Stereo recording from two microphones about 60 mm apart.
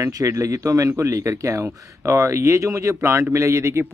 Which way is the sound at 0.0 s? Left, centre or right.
Right.